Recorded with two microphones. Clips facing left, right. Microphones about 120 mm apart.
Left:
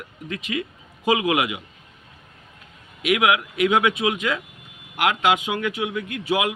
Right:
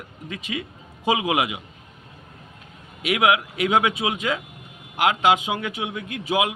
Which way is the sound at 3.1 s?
30° right (ahead or behind).